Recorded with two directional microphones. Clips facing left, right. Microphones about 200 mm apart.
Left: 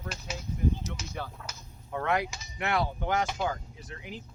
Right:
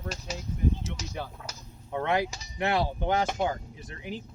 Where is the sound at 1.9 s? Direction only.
25° right (ahead or behind).